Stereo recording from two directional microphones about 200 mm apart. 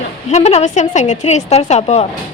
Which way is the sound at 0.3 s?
35° left (ahead or behind).